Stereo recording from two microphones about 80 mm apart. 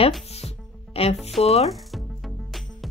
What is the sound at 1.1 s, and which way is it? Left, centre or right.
Music, centre.